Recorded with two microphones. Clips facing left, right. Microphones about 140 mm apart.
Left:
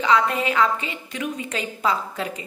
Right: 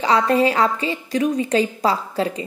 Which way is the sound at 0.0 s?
35° right (ahead or behind).